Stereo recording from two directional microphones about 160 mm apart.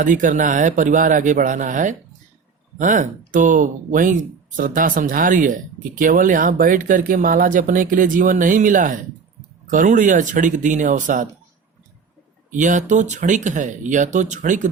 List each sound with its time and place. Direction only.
0.0 s speech: 55° right (ahead or behind)
12.5 s speech: 50° right (ahead or behind)